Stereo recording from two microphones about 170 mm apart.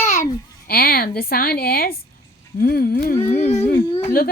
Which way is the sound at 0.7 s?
65° left (ahead or behind).